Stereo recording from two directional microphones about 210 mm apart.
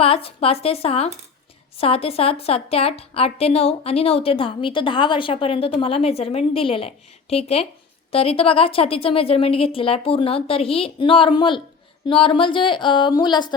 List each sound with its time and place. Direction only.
0.0 s a woman's voice: 25° left (ahead or behind)